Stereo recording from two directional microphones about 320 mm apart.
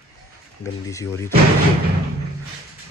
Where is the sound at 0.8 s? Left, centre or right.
Centre.